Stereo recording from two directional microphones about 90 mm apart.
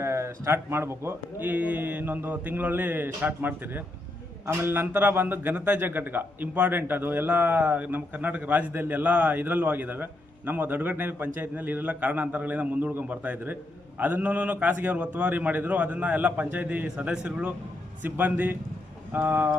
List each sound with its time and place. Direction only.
0.0 s a man's voice: 30° right (ahead or behind)